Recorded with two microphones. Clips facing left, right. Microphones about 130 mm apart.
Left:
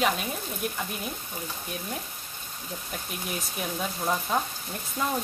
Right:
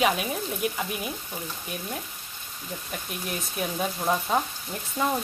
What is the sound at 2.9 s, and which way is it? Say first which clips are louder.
Speech: right 1 dB; centre (ahead or behind).